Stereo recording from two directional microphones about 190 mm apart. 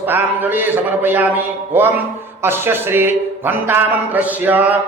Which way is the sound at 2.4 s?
10° right (ahead or behind).